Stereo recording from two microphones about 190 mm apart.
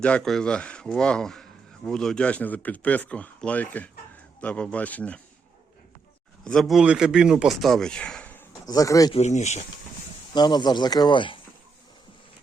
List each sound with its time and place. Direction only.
0.0 s a man's voice: 5° left (ahead or behind)
6.4 s speech: centre (ahead or behind)
8.6 s speech: 20° left (ahead or behind)
9.1 s speech: 35° left (ahead or behind)
10.3 s speech: 20° left (ahead or behind)